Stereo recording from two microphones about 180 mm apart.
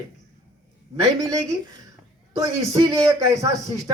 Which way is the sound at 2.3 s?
20° right (ahead or behind).